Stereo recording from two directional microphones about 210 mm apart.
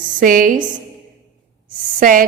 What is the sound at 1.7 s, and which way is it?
Speech, 40° right (ahead or behind).